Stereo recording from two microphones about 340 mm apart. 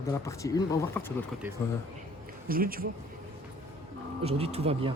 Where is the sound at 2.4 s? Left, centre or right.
Right.